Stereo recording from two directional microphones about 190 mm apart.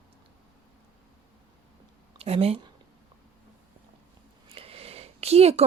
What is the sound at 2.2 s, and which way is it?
Speech, 30° right (ahead or behind).